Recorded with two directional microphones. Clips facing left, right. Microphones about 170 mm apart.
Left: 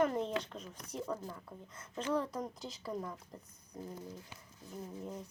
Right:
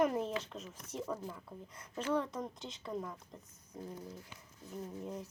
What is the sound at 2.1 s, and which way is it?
Speech, centre (ahead or behind).